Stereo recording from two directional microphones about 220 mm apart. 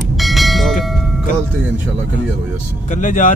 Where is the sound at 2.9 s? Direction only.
35° left (ahead or behind).